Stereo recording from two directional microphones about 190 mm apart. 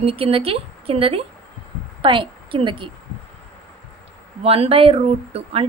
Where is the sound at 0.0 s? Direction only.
30° right (ahead or behind).